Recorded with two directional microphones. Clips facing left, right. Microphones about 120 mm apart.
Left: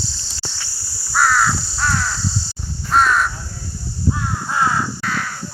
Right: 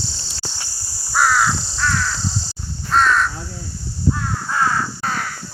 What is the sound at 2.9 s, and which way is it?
Crow, 10° left (ahead or behind).